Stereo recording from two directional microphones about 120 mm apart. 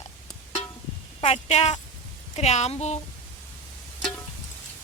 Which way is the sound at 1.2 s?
65° left (ahead or behind).